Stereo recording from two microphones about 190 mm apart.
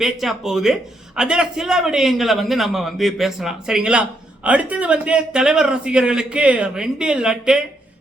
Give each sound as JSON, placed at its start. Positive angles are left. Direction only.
{"t": 0.0, "sound": "a man's voice", "side_deg": 0}